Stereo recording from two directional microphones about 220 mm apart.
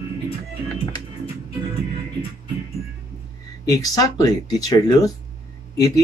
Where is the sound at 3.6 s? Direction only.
15° left (ahead or behind).